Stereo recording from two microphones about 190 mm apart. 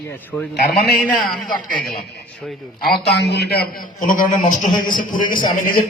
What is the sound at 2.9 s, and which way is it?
A man's voice, 60° left (ahead or behind).